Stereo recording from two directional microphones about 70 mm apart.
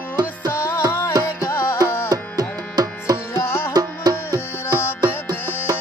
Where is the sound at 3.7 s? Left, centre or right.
Right.